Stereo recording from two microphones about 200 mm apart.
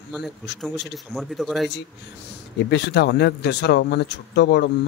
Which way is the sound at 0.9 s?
Centre (ahead or behind).